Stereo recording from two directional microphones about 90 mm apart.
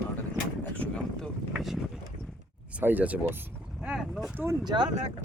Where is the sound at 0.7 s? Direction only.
15° left (ahead or behind).